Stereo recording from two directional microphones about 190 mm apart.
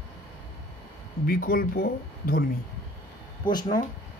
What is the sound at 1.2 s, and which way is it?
Speech, 50° left (ahead or behind).